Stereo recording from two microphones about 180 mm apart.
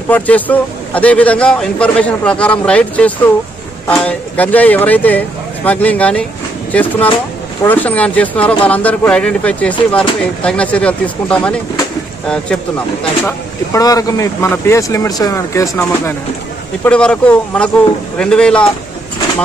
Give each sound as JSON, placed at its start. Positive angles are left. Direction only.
{"t": 0.1, "sound": "a man's voice", "side_deg": 10}
{"t": 13.7, "sound": "a man's voice", "side_deg": 20}